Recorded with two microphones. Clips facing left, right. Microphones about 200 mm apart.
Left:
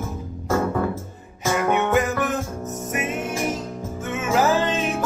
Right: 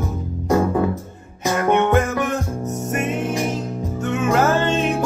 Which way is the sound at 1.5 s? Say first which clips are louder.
Right 3 dB; centre (ahead or behind).